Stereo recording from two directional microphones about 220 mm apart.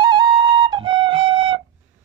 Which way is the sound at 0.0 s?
20° right (ahead or behind).